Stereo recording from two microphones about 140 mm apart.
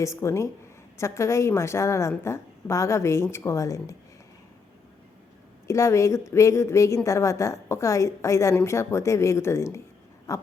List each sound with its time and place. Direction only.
0.0 s a woman's voice: 20° left (ahead or behind)
5.6 s a woman's voice: 20° left (ahead or behind)
10.3 s a sound: 20° left (ahead or behind)